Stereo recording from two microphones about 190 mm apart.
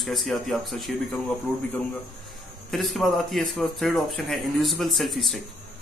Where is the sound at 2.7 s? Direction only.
Centre (ahead or behind).